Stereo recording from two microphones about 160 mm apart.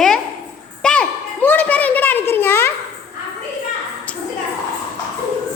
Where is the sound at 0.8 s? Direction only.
5° left (ahead or behind).